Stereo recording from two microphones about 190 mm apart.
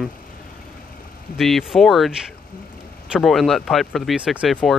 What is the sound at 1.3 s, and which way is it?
Speech, centre (ahead or behind).